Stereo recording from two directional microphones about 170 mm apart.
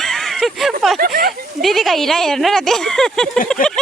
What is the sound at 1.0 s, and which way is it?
Speech, 60° right (ahead or behind).